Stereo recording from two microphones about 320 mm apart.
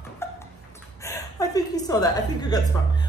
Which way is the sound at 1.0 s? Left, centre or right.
Centre.